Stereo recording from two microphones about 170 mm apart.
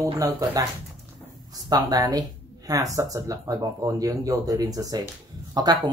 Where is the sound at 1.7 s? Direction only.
20° right (ahead or behind).